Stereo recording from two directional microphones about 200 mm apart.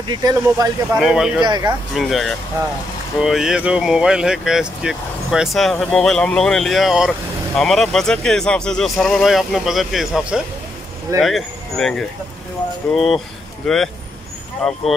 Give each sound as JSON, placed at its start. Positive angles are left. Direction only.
{"t": 0.0, "sound": "speech", "side_deg": -20}
{"t": 0.9, "sound": "speech", "side_deg": -5}
{"t": 1.4, "sound": "speech", "side_deg": -20}
{"t": 2.0, "sound": "speech", "side_deg": 0}